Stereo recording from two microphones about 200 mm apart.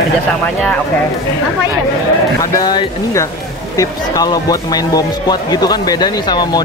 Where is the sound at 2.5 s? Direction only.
20° left (ahead or behind).